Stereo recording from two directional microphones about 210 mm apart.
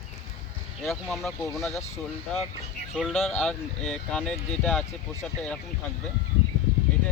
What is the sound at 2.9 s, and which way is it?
Speech, centre (ahead or behind).